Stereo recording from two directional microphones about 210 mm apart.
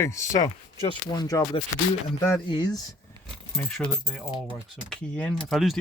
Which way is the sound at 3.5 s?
5° left (ahead or behind).